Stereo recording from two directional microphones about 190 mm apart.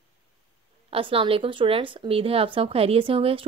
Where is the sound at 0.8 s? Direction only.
30° right (ahead or behind).